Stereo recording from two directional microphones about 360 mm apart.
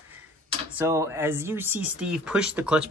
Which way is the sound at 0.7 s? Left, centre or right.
Centre.